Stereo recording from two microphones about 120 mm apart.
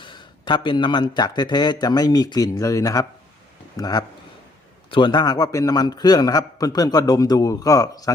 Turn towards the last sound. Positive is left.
turn(degrees=30)  # may be behind; listen again after turning